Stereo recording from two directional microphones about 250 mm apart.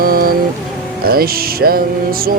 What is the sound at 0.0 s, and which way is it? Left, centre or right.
Music, right.